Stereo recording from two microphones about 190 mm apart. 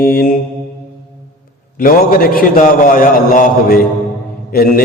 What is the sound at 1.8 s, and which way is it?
A man's voice, 50° left (ahead or behind).